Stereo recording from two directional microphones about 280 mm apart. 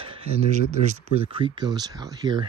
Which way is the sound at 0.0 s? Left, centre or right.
Centre.